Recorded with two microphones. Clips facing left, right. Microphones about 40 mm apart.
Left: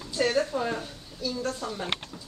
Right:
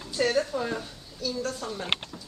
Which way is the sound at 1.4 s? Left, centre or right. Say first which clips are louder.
Left 1 dB; centre.